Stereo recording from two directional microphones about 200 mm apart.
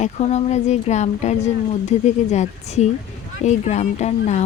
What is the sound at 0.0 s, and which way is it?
Speech, 35° left (ahead or behind).